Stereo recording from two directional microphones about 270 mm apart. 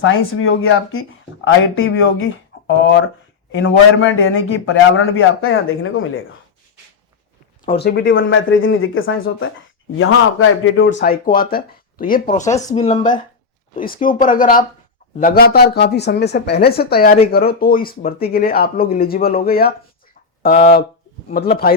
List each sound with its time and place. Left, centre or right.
0.0 s a man's voice: left
7.6 s a man's voice: left
12.5 s speech: centre
12.7 s a woman's voice: left